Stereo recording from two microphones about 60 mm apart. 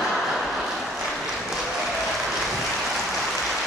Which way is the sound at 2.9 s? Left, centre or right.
Centre.